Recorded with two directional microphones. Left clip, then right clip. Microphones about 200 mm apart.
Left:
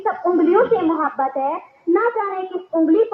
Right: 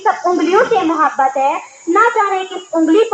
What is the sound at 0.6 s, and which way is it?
Speech, 40° right (ahead or behind).